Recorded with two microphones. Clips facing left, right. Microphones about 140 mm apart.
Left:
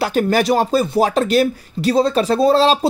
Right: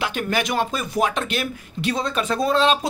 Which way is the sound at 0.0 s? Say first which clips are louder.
Left 8 dB; 40° left (ahead or behind).